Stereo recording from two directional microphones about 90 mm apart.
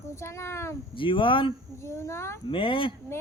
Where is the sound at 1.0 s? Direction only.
70° left (ahead or behind).